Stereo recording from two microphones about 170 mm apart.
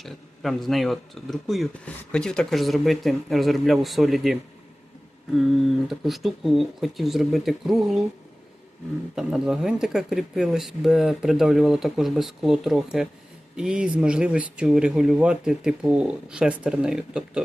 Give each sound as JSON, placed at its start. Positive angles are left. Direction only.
{"t": 0.0, "sound": "speech", "side_deg": 0}
{"t": 5.9, "sound": "speech", "side_deg": 0}
{"t": 9.1, "sound": "speech", "side_deg": 0}